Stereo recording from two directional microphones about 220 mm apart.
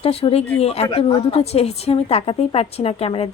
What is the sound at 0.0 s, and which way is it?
A woman's voice, 25° left (ahead or behind).